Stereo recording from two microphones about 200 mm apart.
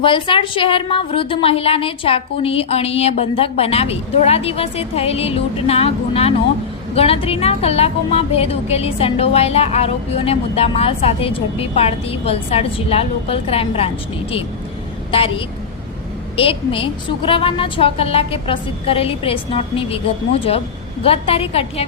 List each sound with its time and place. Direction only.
0.0 s a woman's voice: 25° left (ahead or behind)
21.0 s a woman's voice: 30° left (ahead or behind)